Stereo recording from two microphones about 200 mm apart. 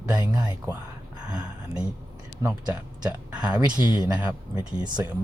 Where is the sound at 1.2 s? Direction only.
5° right (ahead or behind).